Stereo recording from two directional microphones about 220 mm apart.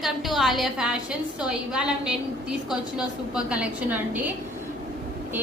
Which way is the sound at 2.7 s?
5° right (ahead or behind).